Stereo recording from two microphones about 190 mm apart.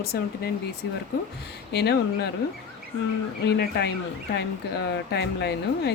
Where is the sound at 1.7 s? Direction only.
60° left (ahead or behind).